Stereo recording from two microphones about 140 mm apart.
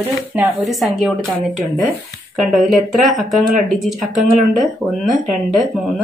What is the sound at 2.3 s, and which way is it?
Speech, centre (ahead or behind).